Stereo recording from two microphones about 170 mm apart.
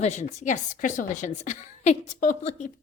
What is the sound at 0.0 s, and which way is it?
A woman's voice, 40° left (ahead or behind).